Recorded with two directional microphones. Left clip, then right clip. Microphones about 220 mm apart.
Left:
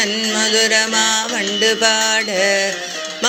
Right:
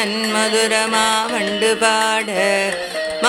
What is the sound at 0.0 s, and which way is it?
Music, 10° right (ahead or behind).